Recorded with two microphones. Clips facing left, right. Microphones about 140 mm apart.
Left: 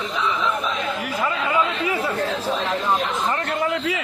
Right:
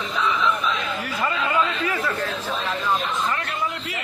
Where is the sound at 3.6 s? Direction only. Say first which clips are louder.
Left 5 dB; 90° left.